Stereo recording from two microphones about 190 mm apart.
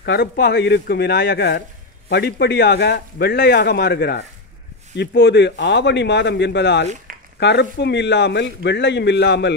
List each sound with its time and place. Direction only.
0.0 s speech: 60° left (ahead or behind)